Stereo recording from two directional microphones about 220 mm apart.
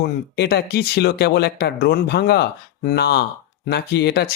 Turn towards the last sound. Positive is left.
turn(degrees=50)  # may be behind; listen again after turning